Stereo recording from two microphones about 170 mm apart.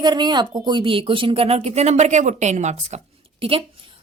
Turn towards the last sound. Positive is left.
turn(degrees=-35)  # may be behind; listen again after turning